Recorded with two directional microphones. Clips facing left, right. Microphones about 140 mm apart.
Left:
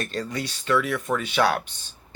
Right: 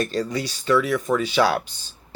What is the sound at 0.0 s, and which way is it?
Speech, 35° right (ahead or behind).